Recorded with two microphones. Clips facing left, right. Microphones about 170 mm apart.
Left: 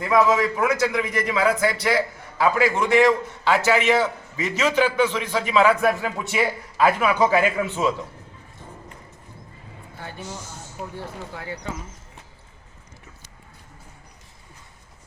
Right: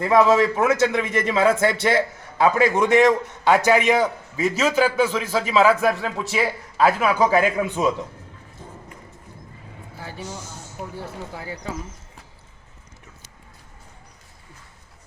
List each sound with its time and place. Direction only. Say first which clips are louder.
0.0 s a man's voice: right 3 dB; 25° right (ahead or behind)
10.8 s speech: right 1 dB; 5° right (ahead or behind)